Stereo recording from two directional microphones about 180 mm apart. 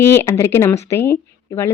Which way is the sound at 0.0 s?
15° left (ahead or behind).